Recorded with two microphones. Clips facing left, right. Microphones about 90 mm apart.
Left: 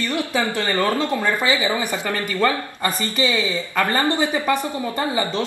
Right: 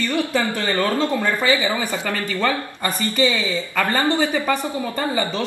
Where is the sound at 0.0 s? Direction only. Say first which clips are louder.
Right 1 dB; 20° left (ahead or behind).